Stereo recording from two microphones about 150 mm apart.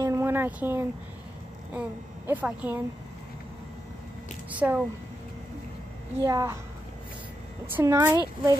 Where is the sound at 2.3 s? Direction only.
10° right (ahead or behind).